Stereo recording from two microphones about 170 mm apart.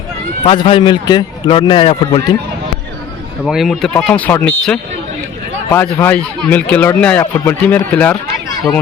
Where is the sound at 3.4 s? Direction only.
Centre (ahead or behind).